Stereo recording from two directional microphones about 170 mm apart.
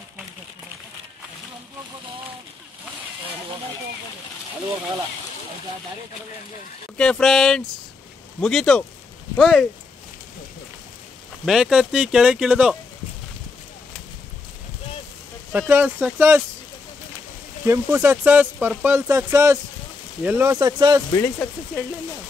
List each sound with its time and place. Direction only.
7.0 s speech: 5° left (ahead or behind)
11.4 s speech: 5° right (ahead or behind)
15.7 s speech: 10° right (ahead or behind)
17.6 s speech: 15° right (ahead or behind)
20.5 s speech: 25° right (ahead or behind)
21.1 s speech: 15° left (ahead or behind)